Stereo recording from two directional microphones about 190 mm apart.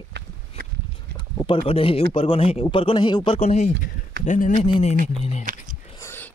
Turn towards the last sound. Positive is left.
turn(degrees=15)  # may be behind; listen again after turning